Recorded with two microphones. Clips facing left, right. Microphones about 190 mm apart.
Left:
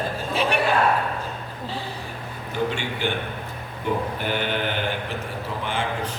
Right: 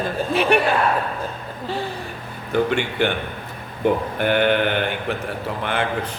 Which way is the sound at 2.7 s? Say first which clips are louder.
Right 6 dB; 60° right (ahead or behind).